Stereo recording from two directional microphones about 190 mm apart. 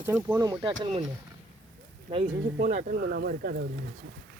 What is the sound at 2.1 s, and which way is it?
Speech, 35° right (ahead or behind).